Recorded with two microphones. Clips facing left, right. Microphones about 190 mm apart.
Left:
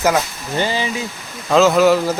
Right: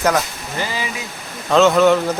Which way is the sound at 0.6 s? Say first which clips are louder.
Left 5 dB; 30° left (ahead or behind).